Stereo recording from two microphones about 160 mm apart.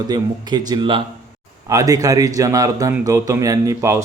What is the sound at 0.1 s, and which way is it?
A man's voice, 25° right (ahead or behind).